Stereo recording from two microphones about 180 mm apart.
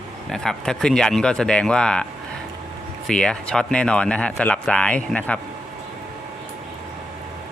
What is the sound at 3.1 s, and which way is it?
Speech, 5° left (ahead or behind).